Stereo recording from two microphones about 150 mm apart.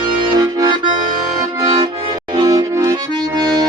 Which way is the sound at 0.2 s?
30° right (ahead or behind).